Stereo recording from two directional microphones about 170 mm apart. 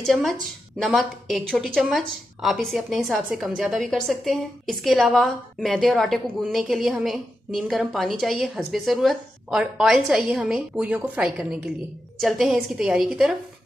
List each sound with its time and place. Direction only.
0.0 s a woman's voice: centre (ahead or behind)